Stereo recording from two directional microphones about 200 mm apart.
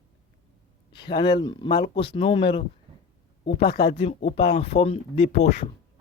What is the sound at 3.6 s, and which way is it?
Speech, 55° left (ahead or behind).